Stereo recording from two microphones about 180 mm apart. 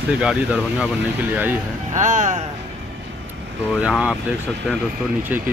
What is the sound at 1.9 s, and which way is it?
Speech, 40° right (ahead or behind).